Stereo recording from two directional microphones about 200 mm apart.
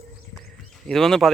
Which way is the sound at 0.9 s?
Centre (ahead or behind).